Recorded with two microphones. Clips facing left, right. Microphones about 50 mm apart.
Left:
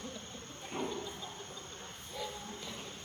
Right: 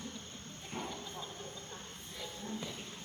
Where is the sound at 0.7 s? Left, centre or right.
Left.